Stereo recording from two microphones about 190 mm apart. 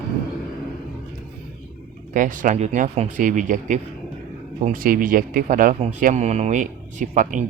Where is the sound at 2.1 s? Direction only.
45° right (ahead or behind).